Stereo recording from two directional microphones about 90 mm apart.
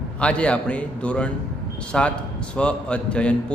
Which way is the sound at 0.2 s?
10° left (ahead or behind).